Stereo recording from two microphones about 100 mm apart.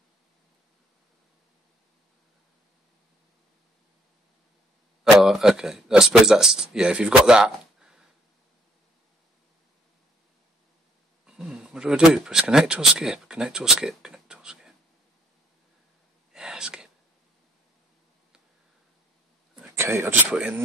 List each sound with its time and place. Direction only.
5.0 s speech: 5° right (ahead or behind)
11.2 s speech: 5° right (ahead or behind)
16.3 s whispering: 5° right (ahead or behind)
19.7 s speech: 25° right (ahead or behind)
20.2 s speech: 10° right (ahead or behind)